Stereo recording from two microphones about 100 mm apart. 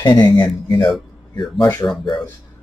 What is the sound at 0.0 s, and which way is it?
Speech, 45° left (ahead or behind).